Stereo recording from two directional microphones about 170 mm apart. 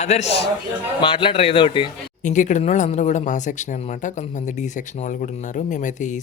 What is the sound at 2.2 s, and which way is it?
Speech, 45° left (ahead or behind).